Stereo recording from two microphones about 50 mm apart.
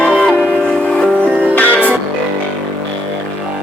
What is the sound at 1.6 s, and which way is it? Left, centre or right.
Music, left.